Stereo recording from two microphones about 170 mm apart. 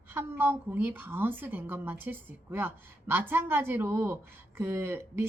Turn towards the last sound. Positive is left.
turn(degrees=-15)  # may be behind; listen again after turning